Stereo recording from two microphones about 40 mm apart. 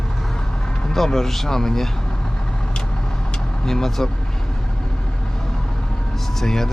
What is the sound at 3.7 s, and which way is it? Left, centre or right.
Speech, centre.